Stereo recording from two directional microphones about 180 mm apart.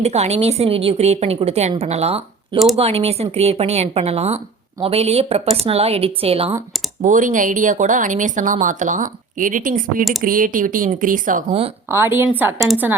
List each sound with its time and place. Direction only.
0.0 s speech: 35° right (ahead or behind)
7.0 s a woman's voice: 45° right (ahead or behind)
10.0 s speech: centre (ahead or behind)
10.2 s a woman's voice: 50° right (ahead or behind)
11.9 s a woman's voice: 10° right (ahead or behind)